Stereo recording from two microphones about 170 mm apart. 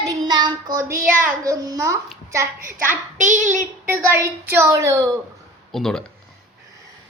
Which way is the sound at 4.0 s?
15° right (ahead or behind).